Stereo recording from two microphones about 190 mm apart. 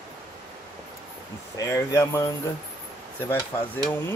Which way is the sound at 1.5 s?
15° left (ahead or behind).